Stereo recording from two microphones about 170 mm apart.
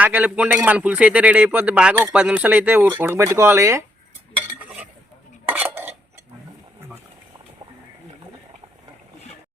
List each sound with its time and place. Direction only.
0.0 s speech: 10° right (ahead or behind)
5.5 s dishes: 10° right (ahead or behind)